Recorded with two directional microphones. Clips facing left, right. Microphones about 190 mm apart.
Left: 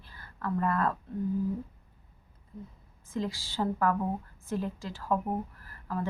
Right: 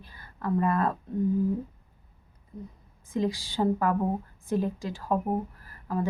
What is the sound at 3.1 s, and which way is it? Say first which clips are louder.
Speech: right 5 dB; 15° right (ahead or behind).